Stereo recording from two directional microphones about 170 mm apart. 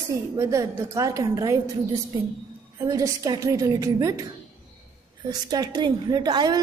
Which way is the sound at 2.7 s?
20° right (ahead or behind).